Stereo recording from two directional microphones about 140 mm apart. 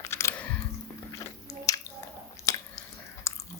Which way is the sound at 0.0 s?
20° left (ahead or behind).